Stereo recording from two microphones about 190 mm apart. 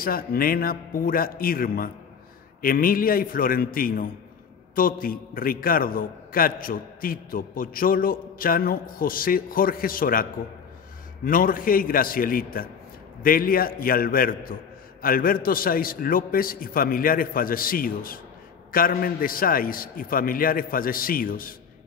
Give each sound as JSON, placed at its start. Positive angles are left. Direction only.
{"t": 0.0, "sound": "a man's voice", "side_deg": 50}
{"t": 11.2, "sound": "a man's voice", "side_deg": 45}